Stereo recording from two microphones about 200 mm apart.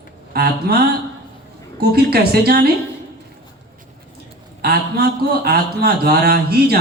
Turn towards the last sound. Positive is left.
turn(degrees=-50)  # may be behind; listen again after turning